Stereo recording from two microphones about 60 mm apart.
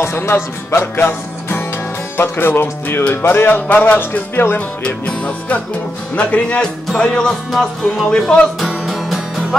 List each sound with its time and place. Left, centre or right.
0.0 s music: left
2.1 s speech: left
4.6 s music: centre
7.0 s speech: centre
8.5 s music: centre